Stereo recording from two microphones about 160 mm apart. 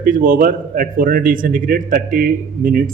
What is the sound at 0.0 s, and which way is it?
A man's voice, 60° right (ahead or behind).